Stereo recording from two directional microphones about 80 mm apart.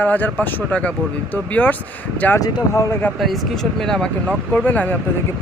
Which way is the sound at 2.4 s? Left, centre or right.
Left.